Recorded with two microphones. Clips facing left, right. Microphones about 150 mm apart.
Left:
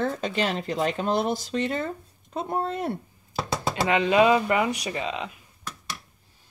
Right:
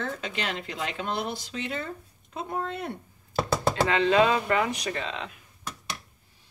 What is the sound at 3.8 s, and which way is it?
Speech, 15° left (ahead or behind).